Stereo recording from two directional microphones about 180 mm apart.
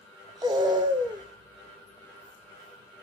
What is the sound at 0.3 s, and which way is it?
Music, 20° right (ahead or behind).